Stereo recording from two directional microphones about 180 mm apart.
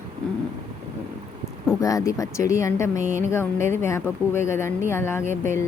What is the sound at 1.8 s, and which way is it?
Speech, 20° left (ahead or behind).